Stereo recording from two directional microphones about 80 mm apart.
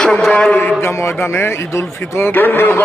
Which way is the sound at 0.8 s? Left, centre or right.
Left.